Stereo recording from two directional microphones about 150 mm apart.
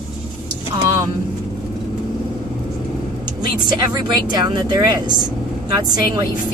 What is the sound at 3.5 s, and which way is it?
Speech, 30° right (ahead or behind).